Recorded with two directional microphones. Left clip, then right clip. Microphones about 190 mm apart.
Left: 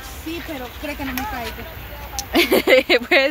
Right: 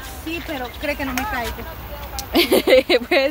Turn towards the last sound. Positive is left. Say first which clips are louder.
# left 1 dB
turn(degrees=0)  # may be behind; listen again after turning